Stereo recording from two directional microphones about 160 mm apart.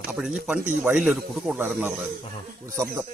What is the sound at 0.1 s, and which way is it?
Speech, 5° right (ahead or behind).